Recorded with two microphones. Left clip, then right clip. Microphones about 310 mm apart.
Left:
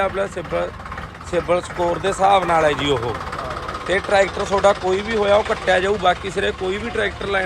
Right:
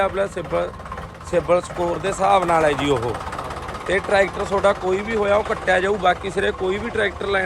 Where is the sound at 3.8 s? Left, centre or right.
Centre.